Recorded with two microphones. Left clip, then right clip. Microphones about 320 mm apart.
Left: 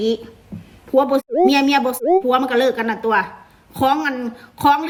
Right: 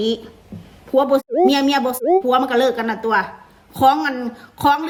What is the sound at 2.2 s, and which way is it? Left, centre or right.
A woman's voice, centre.